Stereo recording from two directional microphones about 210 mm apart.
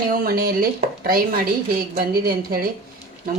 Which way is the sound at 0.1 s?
45° right (ahead or behind).